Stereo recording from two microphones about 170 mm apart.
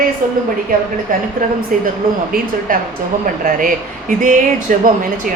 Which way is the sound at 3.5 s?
50° right (ahead or behind).